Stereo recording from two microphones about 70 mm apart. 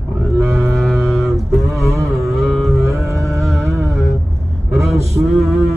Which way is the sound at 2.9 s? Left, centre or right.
Right.